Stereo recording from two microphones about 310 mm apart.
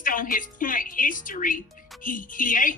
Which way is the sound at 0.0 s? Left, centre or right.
Left.